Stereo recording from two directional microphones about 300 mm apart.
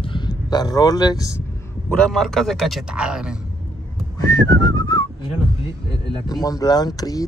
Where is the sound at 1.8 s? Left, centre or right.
Centre.